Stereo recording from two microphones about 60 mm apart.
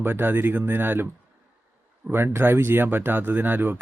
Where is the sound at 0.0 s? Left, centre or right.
Right.